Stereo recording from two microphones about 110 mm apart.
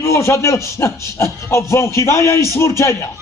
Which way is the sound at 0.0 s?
25° left (ahead or behind).